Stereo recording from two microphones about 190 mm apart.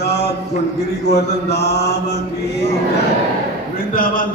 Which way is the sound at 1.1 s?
60° left (ahead or behind).